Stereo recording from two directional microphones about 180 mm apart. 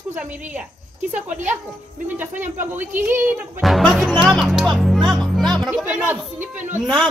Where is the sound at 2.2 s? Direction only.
10° right (ahead or behind).